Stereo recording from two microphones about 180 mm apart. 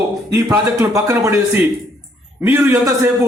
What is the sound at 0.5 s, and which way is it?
Speech, 15° right (ahead or behind).